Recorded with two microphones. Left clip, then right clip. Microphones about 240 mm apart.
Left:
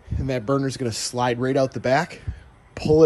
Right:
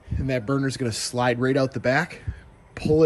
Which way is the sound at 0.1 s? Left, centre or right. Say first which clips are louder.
Left 2 dB; centre.